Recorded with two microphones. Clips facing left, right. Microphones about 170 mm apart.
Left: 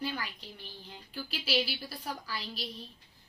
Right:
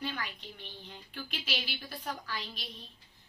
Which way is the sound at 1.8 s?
10° left (ahead or behind).